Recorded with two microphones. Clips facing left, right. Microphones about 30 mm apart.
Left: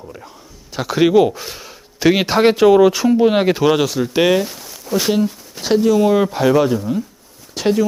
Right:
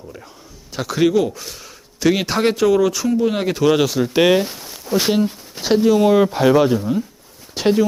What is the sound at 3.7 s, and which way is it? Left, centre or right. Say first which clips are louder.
Speech: even; centre.